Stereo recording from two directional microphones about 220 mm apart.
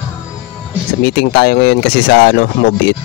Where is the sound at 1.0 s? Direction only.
45° left (ahead or behind).